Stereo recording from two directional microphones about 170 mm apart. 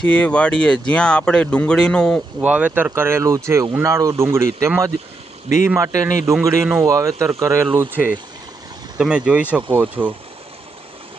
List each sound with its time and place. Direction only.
0.0 s speech: 5° left (ahead or behind)
2.4 s speech: 10° right (ahead or behind)